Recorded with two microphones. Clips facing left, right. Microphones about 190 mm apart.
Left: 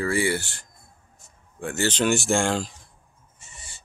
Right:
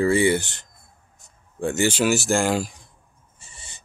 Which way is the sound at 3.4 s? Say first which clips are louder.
Even; 30° right (ahead or behind).